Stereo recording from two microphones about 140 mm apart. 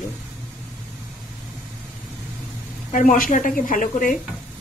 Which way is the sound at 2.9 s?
70° left (ahead or behind).